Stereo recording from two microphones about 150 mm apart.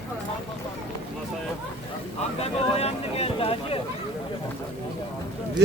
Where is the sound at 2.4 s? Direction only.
45° left (ahead or behind).